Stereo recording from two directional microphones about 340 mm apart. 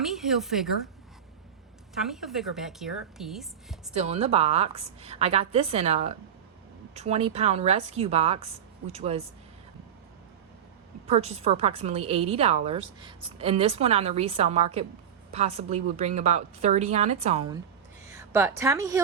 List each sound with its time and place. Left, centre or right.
0.0 s speech: centre
2.0 s speech: centre
3.9 s a woman's voice: centre
11.0 s a woman's voice: centre